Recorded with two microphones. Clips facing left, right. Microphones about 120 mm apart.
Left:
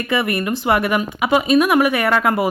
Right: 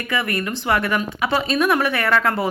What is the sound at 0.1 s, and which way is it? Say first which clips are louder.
Speech: left 4 dB; 20° left (ahead or behind).